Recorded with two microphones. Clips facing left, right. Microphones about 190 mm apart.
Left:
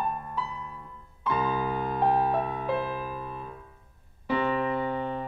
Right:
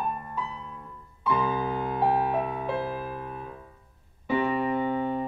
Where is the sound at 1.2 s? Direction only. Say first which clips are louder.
Right 1 dB; 10° right (ahead or behind).